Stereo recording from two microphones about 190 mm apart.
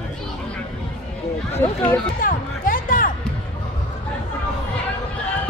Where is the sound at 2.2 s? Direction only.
45° left (ahead or behind).